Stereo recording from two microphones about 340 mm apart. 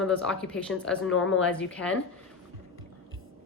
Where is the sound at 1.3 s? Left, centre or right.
Centre.